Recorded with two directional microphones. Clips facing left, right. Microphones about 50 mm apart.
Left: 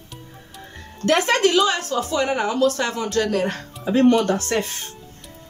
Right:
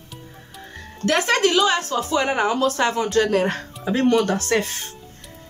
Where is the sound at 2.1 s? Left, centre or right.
Right.